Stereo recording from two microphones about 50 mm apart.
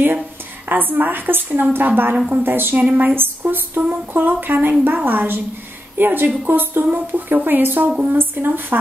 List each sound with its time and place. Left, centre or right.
0.7 s a woman's voice: right
2.1 s a woman's voice: right
2.4 s a woman's voice: right